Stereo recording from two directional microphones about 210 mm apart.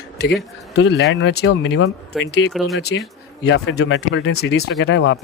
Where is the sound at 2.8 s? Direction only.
50° left (ahead or behind).